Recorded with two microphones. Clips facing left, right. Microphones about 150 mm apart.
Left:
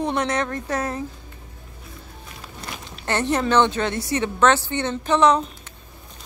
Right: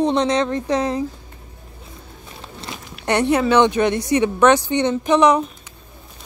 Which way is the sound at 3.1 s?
10° right (ahead or behind).